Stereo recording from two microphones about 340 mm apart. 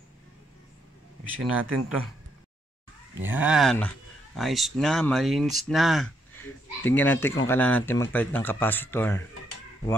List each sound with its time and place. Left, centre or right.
1.4 s speech: right
3.2 s speech: centre